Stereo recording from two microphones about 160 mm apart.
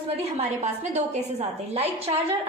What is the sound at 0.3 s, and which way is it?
A woman's voice, 45° right (ahead or behind).